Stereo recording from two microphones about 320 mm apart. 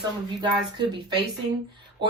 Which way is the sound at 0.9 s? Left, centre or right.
Centre.